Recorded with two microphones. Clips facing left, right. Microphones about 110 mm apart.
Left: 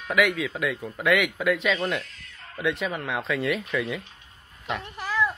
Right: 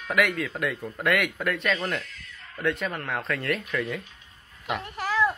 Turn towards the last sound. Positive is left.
turn(degrees=-15)  # may be behind; listen again after turning